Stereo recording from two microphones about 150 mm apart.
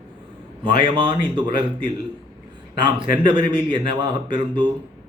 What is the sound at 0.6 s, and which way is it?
A man's voice, 35° right (ahead or behind).